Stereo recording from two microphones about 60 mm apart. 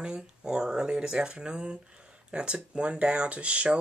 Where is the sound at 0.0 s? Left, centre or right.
Centre.